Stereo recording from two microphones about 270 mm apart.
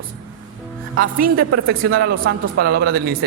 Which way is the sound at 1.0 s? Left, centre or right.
Right.